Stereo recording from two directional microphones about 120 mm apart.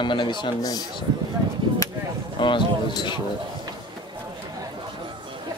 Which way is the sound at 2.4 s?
40° left (ahead or behind).